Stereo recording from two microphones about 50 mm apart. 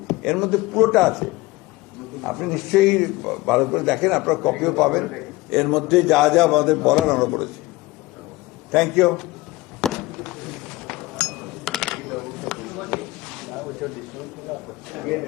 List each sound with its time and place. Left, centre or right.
0.1 s a man's voice: centre
8.7 s a man's voice: centre
9.8 s chink: centre